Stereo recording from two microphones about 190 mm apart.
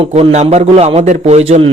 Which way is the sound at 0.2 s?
35° right (ahead or behind).